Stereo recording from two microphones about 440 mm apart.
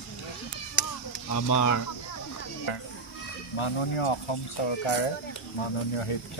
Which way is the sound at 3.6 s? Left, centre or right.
Left.